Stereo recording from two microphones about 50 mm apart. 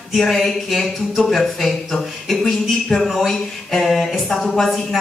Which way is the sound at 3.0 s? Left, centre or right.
Centre.